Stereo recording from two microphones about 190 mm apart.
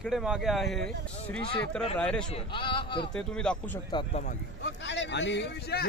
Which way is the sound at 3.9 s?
35° left (ahead or behind).